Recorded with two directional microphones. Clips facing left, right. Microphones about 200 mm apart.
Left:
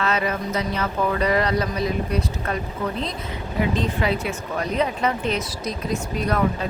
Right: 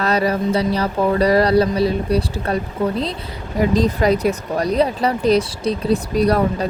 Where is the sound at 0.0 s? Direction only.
35° right (ahead or behind).